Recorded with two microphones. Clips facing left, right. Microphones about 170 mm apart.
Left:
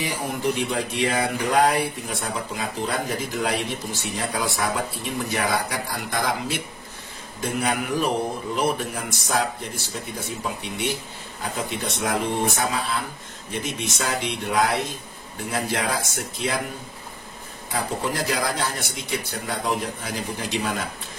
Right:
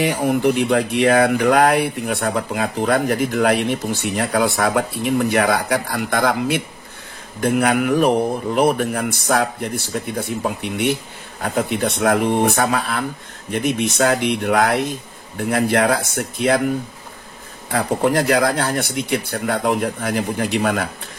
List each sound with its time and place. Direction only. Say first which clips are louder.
0.0 s speech: right 9 dB; 65° right (ahead or behind)
17.6 s speech: right 8 dB; 60° right (ahead or behind)